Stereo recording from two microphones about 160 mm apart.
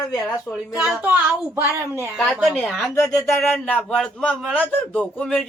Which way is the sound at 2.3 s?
Centre (ahead or behind).